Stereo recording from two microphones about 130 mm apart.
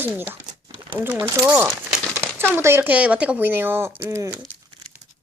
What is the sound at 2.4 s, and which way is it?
Speech, 20° right (ahead or behind).